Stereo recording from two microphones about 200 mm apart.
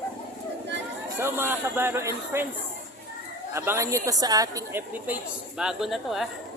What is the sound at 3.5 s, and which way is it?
A woman's voice, 10° right (ahead or behind).